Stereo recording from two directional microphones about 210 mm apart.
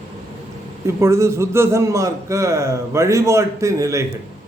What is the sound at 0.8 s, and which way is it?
A man's voice, 15° right (ahead or behind).